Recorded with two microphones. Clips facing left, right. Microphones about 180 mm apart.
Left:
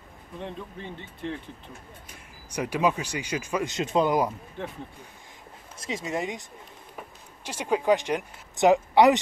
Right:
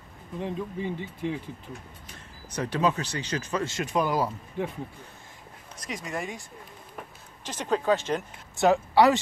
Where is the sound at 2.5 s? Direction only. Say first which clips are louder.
Left 1 dB; 10° left (ahead or behind).